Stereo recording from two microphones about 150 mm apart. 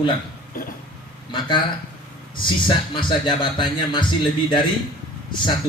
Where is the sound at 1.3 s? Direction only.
30° left (ahead or behind).